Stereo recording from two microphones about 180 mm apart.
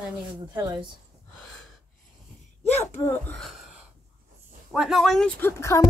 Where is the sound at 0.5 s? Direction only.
25° right (ahead or behind).